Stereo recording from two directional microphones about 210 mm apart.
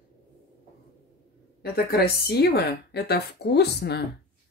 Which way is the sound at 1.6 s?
50° left (ahead or behind).